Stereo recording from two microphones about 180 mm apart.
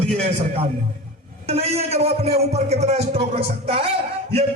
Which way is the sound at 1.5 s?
35° right (ahead or behind).